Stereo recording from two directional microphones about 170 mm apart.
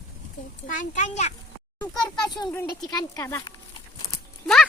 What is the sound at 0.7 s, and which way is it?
Speech, 50° left (ahead or behind).